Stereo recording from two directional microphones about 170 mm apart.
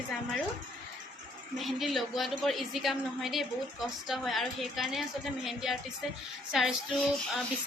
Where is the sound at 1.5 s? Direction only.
Centre (ahead or behind).